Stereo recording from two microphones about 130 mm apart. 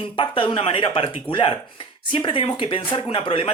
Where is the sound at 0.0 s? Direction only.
40° left (ahead or behind).